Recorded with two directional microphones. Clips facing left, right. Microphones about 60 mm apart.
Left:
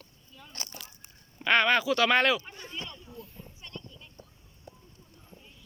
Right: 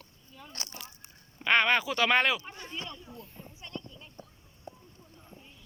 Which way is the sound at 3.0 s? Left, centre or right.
Right.